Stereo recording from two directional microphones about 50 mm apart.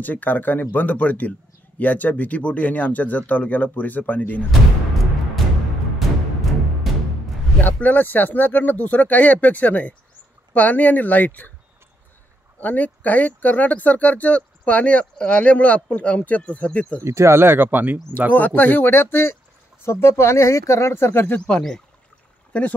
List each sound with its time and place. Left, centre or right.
0.0 s speech: left
5.9 s music: centre
7.6 s speech: left
12.5 s speech: left
17.0 s speech: right
18.3 s speech: left
21.5 s speech: left